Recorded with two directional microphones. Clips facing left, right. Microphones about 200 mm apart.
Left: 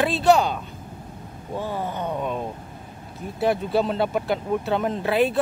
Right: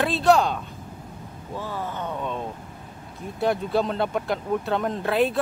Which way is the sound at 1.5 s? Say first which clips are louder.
Left 3 dB; 20° left (ahead or behind).